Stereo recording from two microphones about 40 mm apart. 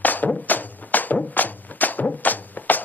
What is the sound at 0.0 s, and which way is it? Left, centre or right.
Music, left.